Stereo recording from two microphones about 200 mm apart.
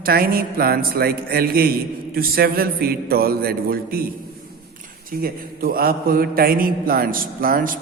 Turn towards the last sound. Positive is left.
turn(degrees=-45)  # may be behind; listen again after turning